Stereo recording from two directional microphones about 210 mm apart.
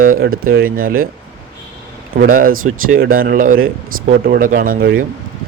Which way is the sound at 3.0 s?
45° right (ahead or behind).